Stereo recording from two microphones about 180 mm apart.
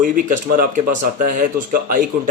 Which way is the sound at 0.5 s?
50° right (ahead or behind).